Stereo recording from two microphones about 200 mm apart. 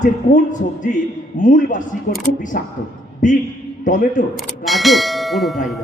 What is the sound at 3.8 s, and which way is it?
Speech, 40° left (ahead or behind).